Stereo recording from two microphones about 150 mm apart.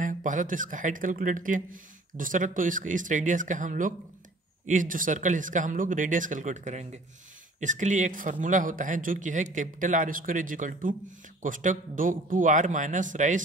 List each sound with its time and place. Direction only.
0.0 s a man's voice: 60° right (ahead or behind)